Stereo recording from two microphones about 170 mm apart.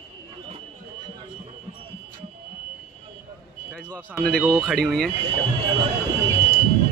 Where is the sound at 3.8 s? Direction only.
5° left (ahead or behind).